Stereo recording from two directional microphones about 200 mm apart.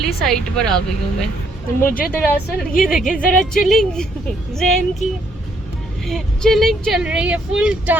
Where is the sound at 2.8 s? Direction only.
Centre (ahead or behind).